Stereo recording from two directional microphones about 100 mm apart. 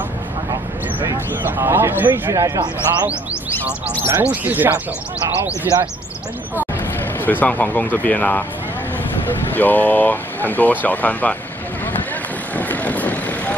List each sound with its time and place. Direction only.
1.6 s speech: 25° right (ahead or behind)
2.3 s a man's voice: 35° right (ahead or behind)
4.0 s speech: 20° right (ahead or behind)
7.2 s speech: 20° left (ahead or behind)
9.5 s speech: 15° left (ahead or behind)
12.5 s vehicle: 15° left (ahead or behind)